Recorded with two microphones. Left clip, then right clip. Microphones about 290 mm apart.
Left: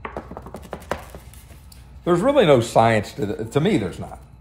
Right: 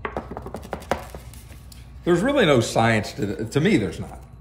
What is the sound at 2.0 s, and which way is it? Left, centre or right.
Speech, centre.